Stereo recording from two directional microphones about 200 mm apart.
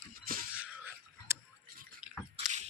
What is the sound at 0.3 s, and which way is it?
Wail, 45° right (ahead or behind).